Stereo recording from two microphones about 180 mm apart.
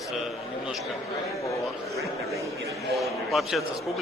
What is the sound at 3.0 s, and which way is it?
Speech, centre (ahead or behind).